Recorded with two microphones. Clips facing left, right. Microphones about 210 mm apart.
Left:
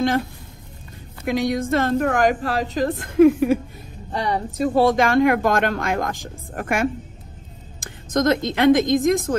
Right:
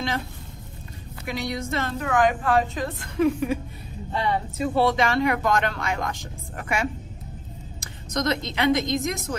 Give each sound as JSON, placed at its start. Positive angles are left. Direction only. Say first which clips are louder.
{"t": 1.2, "sound": "speech", "louder": "left 8 dB", "side_deg": 50}
{"t": 4.1, "sound": "speech", "louder": "left 2 dB", "side_deg": 40}